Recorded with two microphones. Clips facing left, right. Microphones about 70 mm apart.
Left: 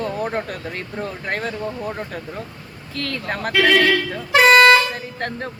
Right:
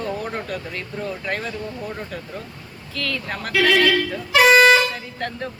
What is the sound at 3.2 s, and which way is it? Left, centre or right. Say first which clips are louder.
Speech: left 2 dB; left.